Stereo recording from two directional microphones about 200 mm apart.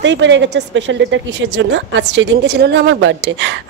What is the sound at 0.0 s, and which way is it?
A woman's voice, 65° right (ahead or behind).